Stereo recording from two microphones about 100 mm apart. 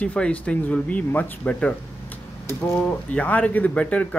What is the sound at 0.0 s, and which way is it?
Speech, 15° left (ahead or behind).